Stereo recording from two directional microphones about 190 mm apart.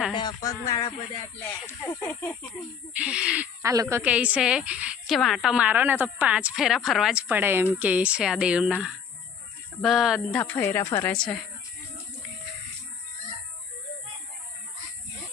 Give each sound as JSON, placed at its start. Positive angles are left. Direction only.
{"t": 0.1, "sound": "speech", "side_deg": 25}
{"t": 2.9, "sound": "a woman's voice", "side_deg": -5}
{"t": 10.4, "sound": "speech", "side_deg": 10}